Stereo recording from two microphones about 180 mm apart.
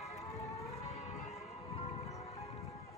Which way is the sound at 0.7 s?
35° left (ahead or behind).